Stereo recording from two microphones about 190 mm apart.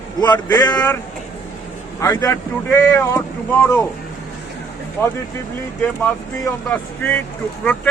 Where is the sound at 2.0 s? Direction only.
15° left (ahead or behind).